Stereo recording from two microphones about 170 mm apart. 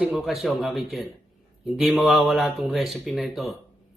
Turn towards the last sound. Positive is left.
turn(degrees=0)  # may be behind; listen again after turning